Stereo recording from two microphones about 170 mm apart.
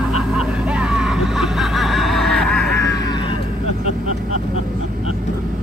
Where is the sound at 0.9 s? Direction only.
5° right (ahead or behind).